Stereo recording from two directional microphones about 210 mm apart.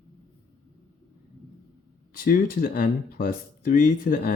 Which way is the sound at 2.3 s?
45° left (ahead or behind).